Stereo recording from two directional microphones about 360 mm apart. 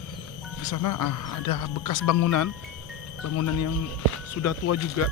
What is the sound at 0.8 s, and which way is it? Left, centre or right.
Speech, left.